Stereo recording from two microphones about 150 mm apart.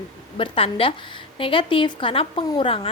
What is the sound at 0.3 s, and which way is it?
A woman's voice, 35° left (ahead or behind).